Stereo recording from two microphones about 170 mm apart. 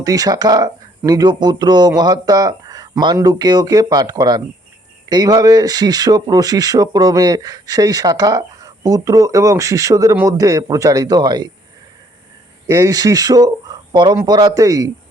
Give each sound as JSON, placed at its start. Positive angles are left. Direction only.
{"t": 0.0, "sound": "speech", "side_deg": -20}
{"t": 12.6, "sound": "speech", "side_deg": -20}